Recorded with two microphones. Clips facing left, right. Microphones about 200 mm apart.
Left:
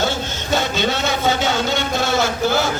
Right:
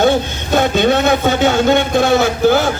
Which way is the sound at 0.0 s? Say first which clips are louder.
Right 9 dB; 55° right (ahead or behind).